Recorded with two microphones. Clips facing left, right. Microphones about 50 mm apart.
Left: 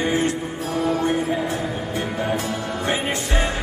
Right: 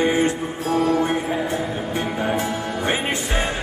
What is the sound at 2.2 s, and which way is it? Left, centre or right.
Music, right.